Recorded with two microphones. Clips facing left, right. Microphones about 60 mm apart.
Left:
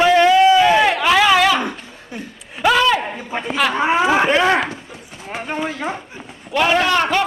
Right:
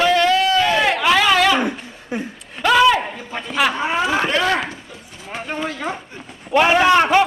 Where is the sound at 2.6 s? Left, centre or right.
Centre.